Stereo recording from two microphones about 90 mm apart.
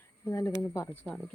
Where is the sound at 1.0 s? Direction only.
5° left (ahead or behind).